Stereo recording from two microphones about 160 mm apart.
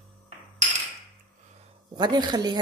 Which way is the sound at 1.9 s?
25° right (ahead or behind).